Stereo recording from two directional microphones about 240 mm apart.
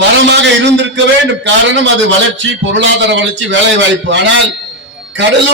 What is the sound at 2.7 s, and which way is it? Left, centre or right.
A man's voice, right.